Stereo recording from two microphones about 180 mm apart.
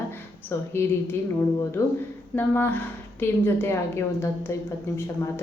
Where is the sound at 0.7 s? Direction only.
15° left (ahead or behind).